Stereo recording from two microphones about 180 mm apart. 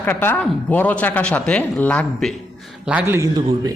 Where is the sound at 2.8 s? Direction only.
10° right (ahead or behind).